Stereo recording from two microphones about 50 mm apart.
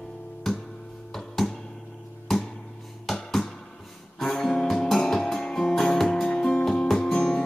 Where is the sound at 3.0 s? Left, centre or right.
Centre.